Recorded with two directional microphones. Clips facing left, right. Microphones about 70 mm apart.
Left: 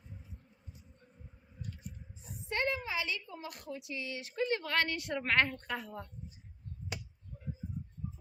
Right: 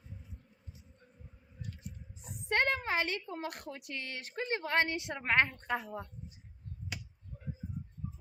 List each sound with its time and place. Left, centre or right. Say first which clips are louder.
2.5 s a woman's voice: right 4 dB; right; by 6.1 s centre